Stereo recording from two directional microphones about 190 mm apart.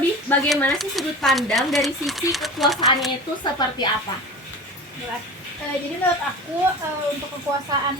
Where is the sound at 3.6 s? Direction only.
20° left (ahead or behind).